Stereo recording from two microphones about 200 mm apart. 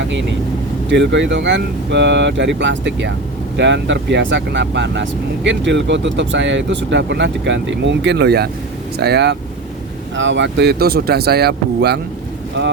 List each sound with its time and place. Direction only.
0.0 s speech: 65° right (ahead or behind)